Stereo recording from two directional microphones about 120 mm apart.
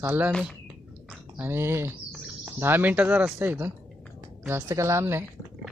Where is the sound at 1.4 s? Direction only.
20° right (ahead or behind).